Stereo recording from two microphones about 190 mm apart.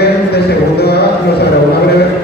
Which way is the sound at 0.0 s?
60° left (ahead or behind).